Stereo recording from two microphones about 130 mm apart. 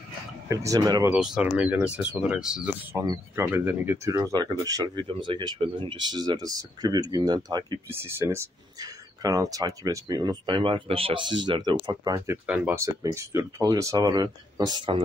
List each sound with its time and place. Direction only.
0.5 s speech: 25° right (ahead or behind)
1.1 s speech: 5° right (ahead or behind)
2.9 s speech: 20° right (ahead or behind)
7.9 s speech: 20° right (ahead or behind)
12.4 s speech: 10° right (ahead or behind)
12.7 s speech: 25° right (ahead or behind)